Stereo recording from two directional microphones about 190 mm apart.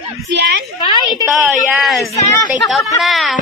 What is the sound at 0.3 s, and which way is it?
Speech, 65° right (ahead or behind).